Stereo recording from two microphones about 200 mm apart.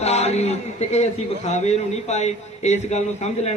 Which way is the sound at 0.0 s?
35° left (ahead or behind).